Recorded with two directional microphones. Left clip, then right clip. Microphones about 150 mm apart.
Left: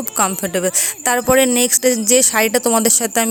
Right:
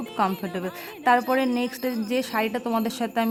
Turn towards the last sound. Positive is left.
turn(degrees=40)  # may be behind; listen again after turning